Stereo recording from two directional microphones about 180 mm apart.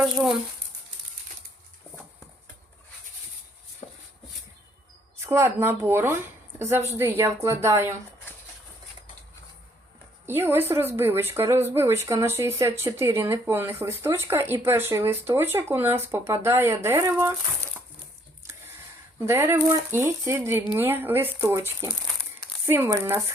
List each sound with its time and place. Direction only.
0.0 s speech: 5° right (ahead or behind)
3.8 s a sound: 40° left (ahead or behind)
5.2 s a woman's voice: 15° right (ahead or behind)
10.2 s a woman's voice: 10° right (ahead or behind)
19.2 s a woman's voice: 15° right (ahead or behind)
22.0 s crumpling: 5° left (ahead or behind)
22.6 s a woman's voice: 15° right (ahead or behind)